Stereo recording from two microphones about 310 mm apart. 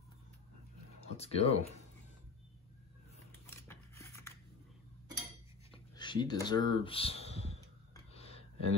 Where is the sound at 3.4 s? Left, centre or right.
Centre.